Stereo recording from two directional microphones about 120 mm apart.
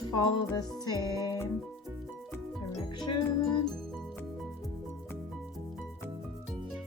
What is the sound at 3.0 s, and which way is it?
Music, 40° left (ahead or behind).